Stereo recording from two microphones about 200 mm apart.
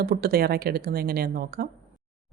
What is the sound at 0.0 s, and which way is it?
Speech, 50° right (ahead or behind).